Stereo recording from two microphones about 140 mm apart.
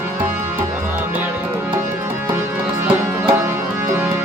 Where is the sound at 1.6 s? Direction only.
15° right (ahead or behind).